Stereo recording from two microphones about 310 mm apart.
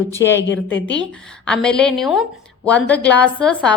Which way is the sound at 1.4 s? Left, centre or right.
Centre.